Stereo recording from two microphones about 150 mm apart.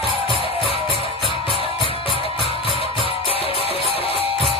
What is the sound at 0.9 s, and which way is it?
Music, 35° left (ahead or behind).